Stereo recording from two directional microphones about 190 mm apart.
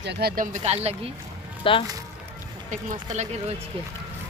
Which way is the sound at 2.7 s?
40° right (ahead or behind).